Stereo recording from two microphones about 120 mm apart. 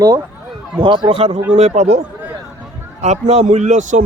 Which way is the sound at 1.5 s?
70° right (ahead or behind).